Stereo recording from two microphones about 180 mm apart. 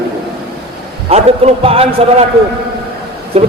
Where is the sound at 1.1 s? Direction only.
35° right (ahead or behind).